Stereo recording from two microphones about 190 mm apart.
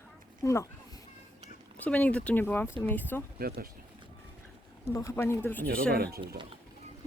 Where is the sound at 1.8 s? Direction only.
5° left (ahead or behind).